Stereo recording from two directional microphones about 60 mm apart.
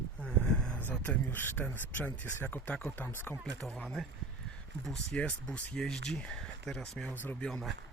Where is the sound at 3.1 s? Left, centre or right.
Left.